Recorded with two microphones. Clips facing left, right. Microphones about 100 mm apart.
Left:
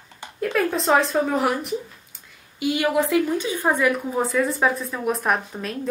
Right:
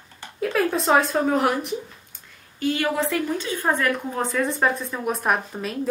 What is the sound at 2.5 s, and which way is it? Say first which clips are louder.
Speech: left 2 dB; 10° left (ahead or behind).